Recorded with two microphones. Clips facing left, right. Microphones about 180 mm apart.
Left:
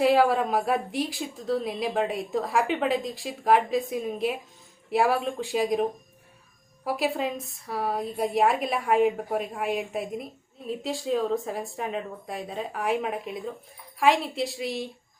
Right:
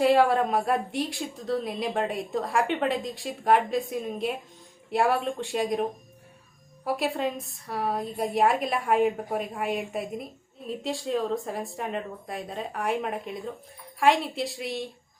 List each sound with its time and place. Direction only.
0.0 s a woman's voice: centre (ahead or behind)